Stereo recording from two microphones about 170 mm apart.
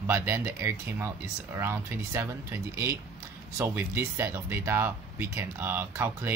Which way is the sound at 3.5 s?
15° right (ahead or behind).